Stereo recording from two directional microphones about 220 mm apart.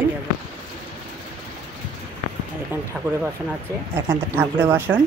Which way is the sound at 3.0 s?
Centre (ahead or behind).